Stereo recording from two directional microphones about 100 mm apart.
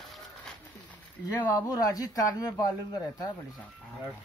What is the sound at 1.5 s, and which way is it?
Speech, 40° left (ahead or behind).